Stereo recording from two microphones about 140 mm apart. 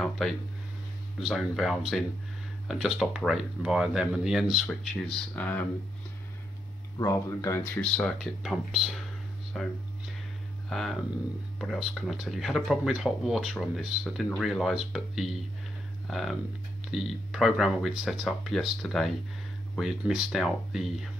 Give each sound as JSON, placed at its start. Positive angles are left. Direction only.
{"t": 1.2, "sound": "speech", "side_deg": 0}
{"t": 7.0, "sound": "speech", "side_deg": 25}
{"t": 7.8, "sound": "speech", "side_deg": 5}